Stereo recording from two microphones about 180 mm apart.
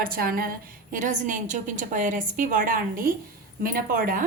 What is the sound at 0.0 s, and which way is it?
A woman's voice, 55° right (ahead or behind).